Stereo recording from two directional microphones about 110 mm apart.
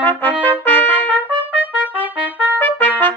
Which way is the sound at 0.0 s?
15° left (ahead or behind).